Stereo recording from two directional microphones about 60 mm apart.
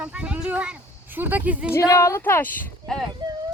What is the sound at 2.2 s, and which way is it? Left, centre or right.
Speech, left.